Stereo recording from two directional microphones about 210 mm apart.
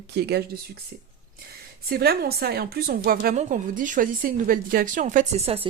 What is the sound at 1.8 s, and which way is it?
A woman's voice, 50° right (ahead or behind).